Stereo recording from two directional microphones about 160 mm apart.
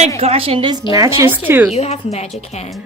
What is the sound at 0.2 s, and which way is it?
A woman's voice, 40° right (ahead or behind).